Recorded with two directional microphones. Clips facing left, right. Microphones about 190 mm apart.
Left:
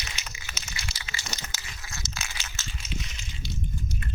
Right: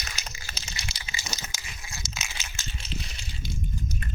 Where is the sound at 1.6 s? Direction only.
20° right (ahead or behind).